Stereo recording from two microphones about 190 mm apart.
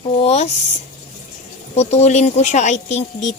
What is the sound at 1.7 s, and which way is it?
Speech, 35° left (ahead or behind).